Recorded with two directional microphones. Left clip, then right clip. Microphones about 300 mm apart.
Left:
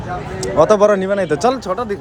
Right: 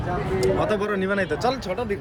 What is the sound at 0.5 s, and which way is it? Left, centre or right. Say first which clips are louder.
Speech: left 12 dB; centre.